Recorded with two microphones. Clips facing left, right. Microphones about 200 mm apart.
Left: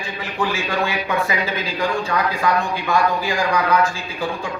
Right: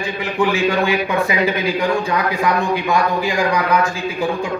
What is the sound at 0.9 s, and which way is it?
A man's voice, 15° right (ahead or behind).